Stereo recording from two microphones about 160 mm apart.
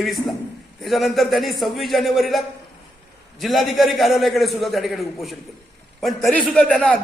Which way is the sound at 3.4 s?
Centre (ahead or behind).